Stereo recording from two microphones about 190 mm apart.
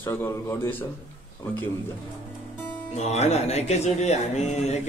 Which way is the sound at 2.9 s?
35° left (ahead or behind).